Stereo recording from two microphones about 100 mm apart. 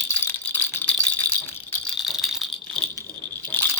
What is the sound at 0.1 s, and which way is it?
Rattle, 15° left (ahead or behind).